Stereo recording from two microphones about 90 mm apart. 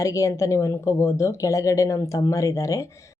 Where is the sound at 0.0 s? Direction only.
35° left (ahead or behind).